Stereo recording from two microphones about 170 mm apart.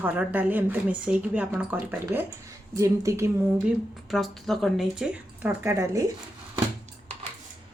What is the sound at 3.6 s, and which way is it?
Speech, centre (ahead or behind).